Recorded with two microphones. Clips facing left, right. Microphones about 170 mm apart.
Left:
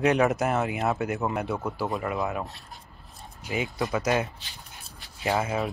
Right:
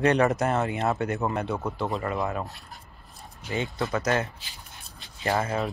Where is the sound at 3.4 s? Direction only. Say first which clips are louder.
Even; 15° left (ahead or behind).